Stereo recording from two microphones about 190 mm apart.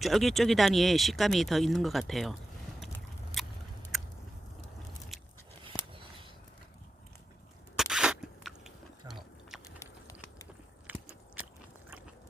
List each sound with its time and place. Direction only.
0.0 s speech: centre (ahead or behind)
3.4 s biting: centre (ahead or behind)
5.6 s a sound: 25° right (ahead or behind)
7.8 s biting: 5° right (ahead or behind)
9.8 s a sound: 15° left (ahead or behind)
10.9 s biting: 10° right (ahead or behind)